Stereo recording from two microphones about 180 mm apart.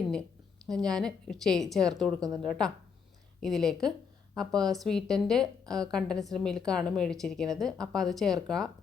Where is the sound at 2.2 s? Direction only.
20° right (ahead or behind).